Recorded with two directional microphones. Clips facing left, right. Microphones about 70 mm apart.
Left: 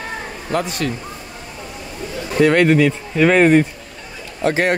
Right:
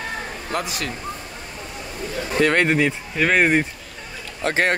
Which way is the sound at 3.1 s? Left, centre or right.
Centre.